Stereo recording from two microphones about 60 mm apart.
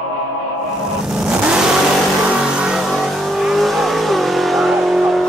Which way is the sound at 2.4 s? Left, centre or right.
Centre.